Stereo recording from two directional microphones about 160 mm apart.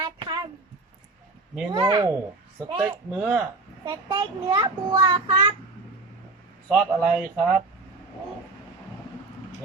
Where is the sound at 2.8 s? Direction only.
10° right (ahead or behind).